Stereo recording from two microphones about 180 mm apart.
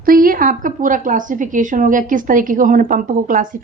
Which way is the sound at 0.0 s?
50° right (ahead or behind).